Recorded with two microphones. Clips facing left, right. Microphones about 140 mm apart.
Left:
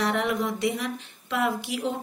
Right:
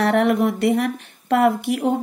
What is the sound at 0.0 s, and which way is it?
Speech, 60° right (ahead or behind).